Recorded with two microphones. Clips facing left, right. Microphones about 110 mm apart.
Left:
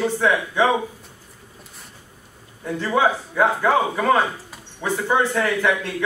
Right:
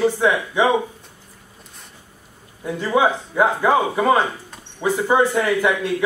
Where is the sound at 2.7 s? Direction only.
15° right (ahead or behind).